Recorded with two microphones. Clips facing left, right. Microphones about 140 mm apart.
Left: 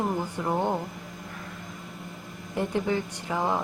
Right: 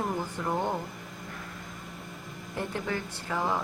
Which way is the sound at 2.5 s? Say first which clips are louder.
Left 6 dB; 15° left (ahead or behind).